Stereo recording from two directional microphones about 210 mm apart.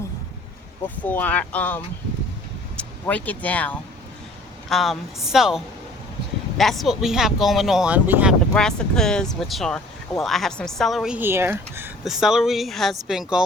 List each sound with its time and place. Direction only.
1.0 s speech: 10° left (ahead or behind)